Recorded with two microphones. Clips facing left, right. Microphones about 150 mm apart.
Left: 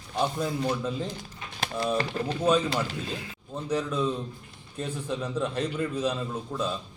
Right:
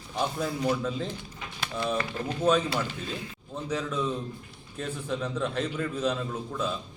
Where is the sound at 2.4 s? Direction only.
10° left (ahead or behind).